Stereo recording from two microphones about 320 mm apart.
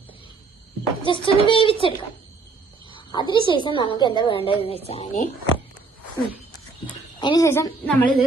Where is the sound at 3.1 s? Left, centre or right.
Centre.